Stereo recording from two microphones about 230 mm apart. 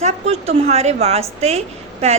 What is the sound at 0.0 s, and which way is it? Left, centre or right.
A woman's voice, right.